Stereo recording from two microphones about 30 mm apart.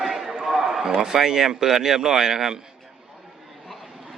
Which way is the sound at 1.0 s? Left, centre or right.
Centre.